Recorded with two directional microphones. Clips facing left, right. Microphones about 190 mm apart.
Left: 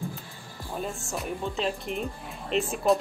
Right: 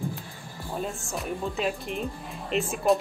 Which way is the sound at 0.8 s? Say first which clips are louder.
Left 1 dB; centre (ahead or behind).